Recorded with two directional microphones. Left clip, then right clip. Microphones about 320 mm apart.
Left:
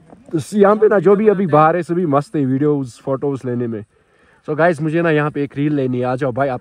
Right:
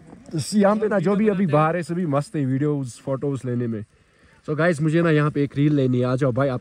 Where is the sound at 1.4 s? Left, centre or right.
Centre.